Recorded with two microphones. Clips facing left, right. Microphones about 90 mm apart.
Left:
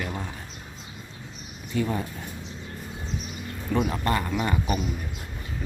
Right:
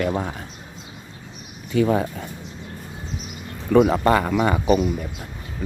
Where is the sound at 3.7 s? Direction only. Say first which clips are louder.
Right 10 dB; 80° right.